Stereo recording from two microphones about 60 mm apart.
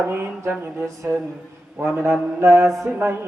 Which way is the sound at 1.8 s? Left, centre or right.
Centre.